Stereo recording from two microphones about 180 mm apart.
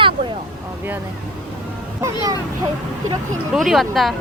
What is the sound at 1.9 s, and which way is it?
Speech, 20° right (ahead or behind).